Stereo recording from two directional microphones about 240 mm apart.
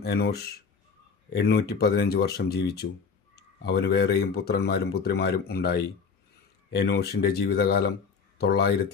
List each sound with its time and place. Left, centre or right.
0.0 s speech: left